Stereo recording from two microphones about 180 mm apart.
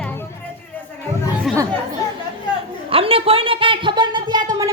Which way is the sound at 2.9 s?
30° right (ahead or behind).